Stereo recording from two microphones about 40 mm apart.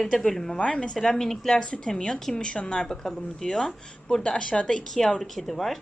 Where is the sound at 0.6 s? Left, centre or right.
Left.